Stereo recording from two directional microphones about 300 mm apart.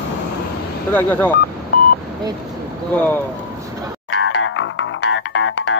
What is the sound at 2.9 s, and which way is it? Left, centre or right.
Speech, centre.